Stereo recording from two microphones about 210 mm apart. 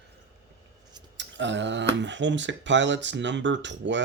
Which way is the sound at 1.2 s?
60° right (ahead or behind).